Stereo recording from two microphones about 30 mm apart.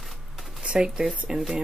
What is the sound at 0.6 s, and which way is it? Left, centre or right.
Speech, right.